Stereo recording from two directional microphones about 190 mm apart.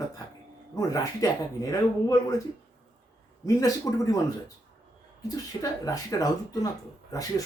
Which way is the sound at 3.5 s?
20° left (ahead or behind).